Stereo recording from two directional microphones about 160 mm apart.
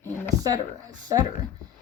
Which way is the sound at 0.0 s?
15° left (ahead or behind).